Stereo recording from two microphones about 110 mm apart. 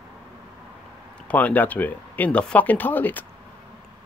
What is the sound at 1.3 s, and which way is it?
Speech, 15° left (ahead or behind).